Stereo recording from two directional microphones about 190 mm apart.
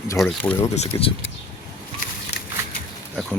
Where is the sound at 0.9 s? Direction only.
15° left (ahead or behind).